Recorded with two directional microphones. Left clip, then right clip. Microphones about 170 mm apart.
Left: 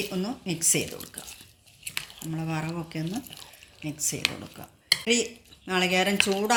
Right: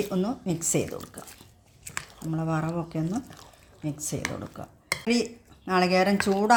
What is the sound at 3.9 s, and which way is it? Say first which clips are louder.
Speech: left 3 dB; 40° right (ahead or behind).